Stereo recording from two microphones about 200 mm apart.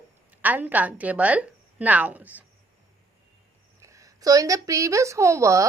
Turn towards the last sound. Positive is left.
turn(degrees=-15)  # may be behind; listen again after turning